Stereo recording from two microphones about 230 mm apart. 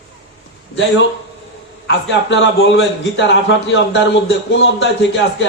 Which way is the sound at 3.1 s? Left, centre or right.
Left.